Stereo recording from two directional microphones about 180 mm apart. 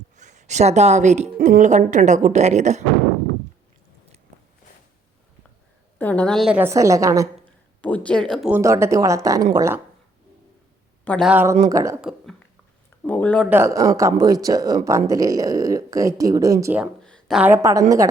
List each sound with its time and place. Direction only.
0.2 s speech: 40° right (ahead or behind)
6.0 s speech: 10° left (ahead or behind); by 7.3 s 15° right (ahead or behind)
7.8 s speech: 10° left (ahead or behind)
8.4 s speech: 15° right (ahead or behind)
11.0 s speech: 10° left (ahead or behind)
11.3 s speech: 10° right (ahead or behind)
12.0 s speech: centre (ahead or behind)
13.5 s speech: 15° right (ahead or behind)
16.7 s speech: 5° right (ahead or behind)
17.1 s a sound: 5° left (ahead or behind)
17.4 s speech: 15° right (ahead or behind)